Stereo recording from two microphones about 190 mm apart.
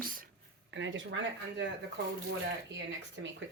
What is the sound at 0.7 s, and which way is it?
Speech, 75° right (ahead or behind).